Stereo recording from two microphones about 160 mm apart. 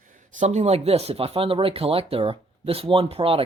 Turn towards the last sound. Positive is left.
turn(degrees=-35)  # may be behind; listen again after turning